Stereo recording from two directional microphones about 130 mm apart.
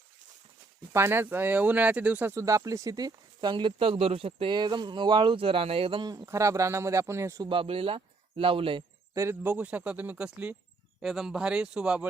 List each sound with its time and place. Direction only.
0.9 s speech: 20° right (ahead or behind)
6.2 s a man's voice: 20° right (ahead or behind)
7.5 s speech: 45° right (ahead or behind)
9.1 s speech: 20° right (ahead or behind)